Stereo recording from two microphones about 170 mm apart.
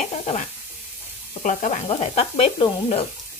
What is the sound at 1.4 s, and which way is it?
Speech, 50° left (ahead or behind).